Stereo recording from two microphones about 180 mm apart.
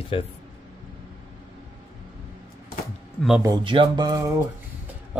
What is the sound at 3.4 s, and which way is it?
Music, 25° right (ahead or behind).